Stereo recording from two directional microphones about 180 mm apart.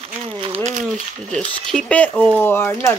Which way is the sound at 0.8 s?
5° left (ahead or behind).